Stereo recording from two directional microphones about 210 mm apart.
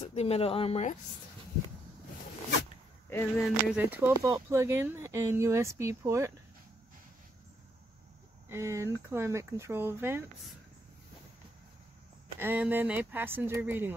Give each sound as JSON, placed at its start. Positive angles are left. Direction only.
{"t": 0.0, "sound": "speech", "side_deg": 30}
{"t": 3.3, "sound": "speech", "side_deg": 0}
{"t": 8.5, "sound": "speech", "side_deg": -15}
{"t": 12.4, "sound": "speech", "side_deg": -10}